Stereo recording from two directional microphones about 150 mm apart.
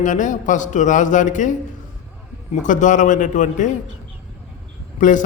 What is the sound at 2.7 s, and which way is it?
A man's voice, 55° left (ahead or behind).